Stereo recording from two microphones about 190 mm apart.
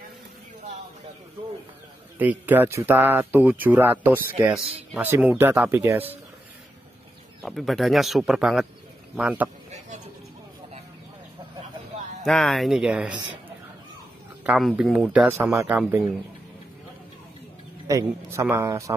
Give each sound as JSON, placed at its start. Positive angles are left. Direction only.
{"t": 2.1, "sound": "speech", "side_deg": -10}
{"t": 7.4, "sound": "speech", "side_deg": 0}
{"t": 12.3, "sound": "speech", "side_deg": 0}
{"t": 14.4, "sound": "speech", "side_deg": 0}
{"t": 17.8, "sound": "speech", "side_deg": -15}